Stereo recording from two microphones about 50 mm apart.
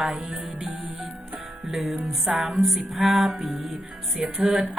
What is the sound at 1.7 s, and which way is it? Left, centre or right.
Music, centre.